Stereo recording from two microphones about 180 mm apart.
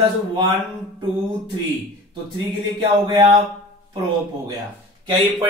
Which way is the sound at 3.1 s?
25° right (ahead or behind).